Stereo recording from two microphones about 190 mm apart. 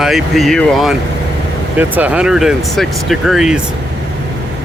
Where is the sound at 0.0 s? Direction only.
Centre (ahead or behind).